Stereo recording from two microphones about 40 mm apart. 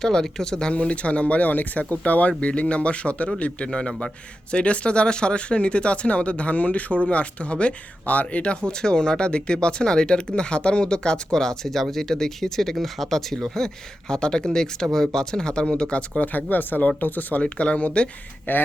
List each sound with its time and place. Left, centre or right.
0.0 s speech: centre
0.7 s speech: left
2.4 s speech: left
3.7 s speech: centre
4.5 s speech: left
8.0 s speech: left
8.6 s speech: left
16.2 s speech: left
17.4 s speech: left
18.5 s speech: left